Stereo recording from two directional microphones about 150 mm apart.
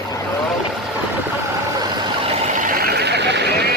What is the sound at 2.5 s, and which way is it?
Vehicle, 60° right (ahead or behind).